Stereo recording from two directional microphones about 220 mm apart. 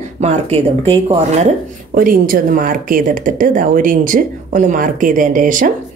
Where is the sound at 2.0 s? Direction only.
40° right (ahead or behind).